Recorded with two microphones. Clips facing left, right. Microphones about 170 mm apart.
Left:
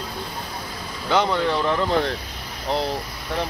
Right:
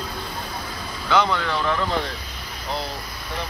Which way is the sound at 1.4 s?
25° left (ahead or behind).